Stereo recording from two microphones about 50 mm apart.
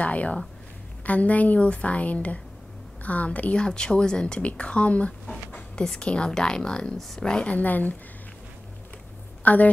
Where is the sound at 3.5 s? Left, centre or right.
Centre.